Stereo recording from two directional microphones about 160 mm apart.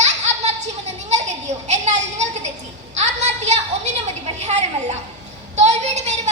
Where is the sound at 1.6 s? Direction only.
45° right (ahead or behind).